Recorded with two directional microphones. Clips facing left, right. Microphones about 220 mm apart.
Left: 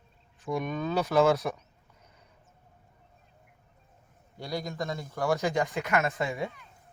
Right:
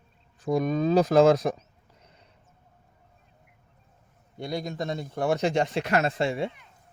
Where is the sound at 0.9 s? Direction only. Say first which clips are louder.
Right 5 dB; 90° right.